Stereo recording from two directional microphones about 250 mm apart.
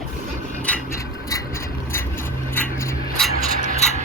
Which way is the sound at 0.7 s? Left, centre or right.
Centre.